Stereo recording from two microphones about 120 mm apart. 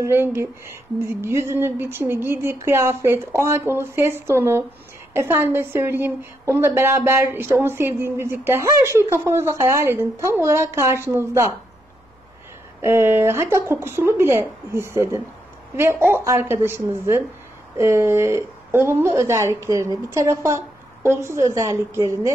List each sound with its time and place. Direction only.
0.0 s a woman's voice: 20° right (ahead or behind)
12.8 s a woman's voice: 20° right (ahead or behind)